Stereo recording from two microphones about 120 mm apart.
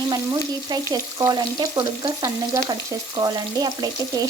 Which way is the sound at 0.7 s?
30° right (ahead or behind).